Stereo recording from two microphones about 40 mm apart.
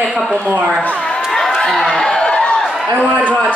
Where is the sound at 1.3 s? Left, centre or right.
Centre.